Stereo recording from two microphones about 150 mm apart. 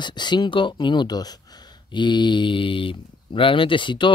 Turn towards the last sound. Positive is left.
turn(degrees=30)  # may be behind; listen again after turning